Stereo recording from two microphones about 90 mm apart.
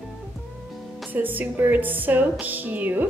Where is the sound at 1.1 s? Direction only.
20° right (ahead or behind).